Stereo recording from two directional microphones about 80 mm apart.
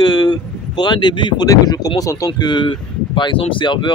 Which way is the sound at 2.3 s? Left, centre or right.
Left.